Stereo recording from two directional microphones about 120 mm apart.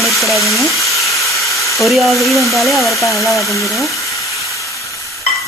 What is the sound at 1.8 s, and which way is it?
Sizzle, centre (ahead or behind).